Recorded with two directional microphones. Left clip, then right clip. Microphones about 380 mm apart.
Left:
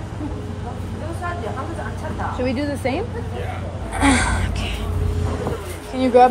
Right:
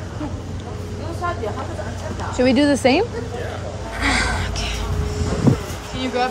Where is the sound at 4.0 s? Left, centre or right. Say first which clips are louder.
Left 2 dB; centre.